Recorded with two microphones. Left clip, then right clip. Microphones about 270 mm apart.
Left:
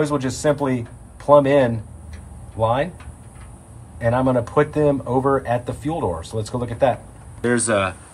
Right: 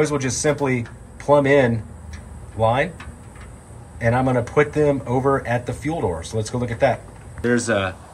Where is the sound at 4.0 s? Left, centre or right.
Centre.